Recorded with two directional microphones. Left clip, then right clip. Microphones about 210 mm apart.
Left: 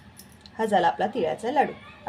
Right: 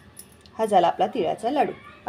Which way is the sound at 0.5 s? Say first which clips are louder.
Right 3 dB; 15° right (ahead or behind).